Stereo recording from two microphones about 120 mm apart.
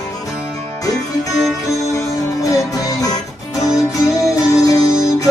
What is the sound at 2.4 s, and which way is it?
Music, 30° left (ahead or behind).